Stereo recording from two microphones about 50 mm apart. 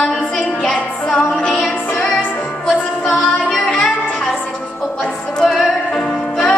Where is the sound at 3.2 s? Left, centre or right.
Centre.